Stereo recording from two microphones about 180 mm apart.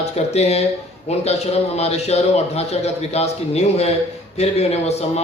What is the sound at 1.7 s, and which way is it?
A man's voice, 35° left (ahead or behind).